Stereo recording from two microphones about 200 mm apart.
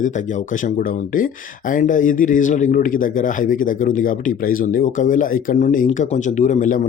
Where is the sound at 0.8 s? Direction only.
45° left (ahead or behind).